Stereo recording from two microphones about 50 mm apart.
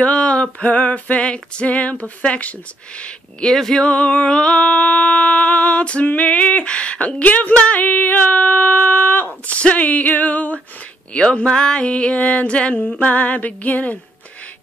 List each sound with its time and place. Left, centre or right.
0.0 s music: left
3.5 s a sound: centre
3.8 s music: left
9.6 s female singing: left
11.1 s music: centre